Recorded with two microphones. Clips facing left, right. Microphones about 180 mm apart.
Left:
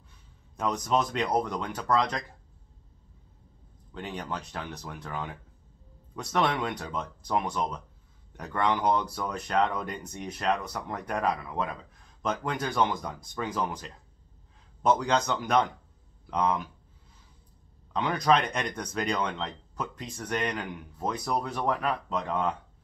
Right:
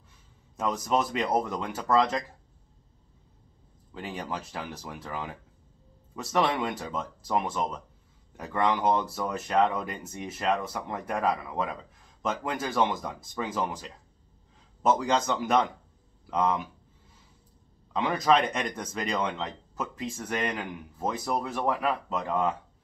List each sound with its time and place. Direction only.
0.6 s speech: 5° right (ahead or behind)
3.9 s speech: 5° right (ahead or behind)
17.9 s speech: 5° right (ahead or behind)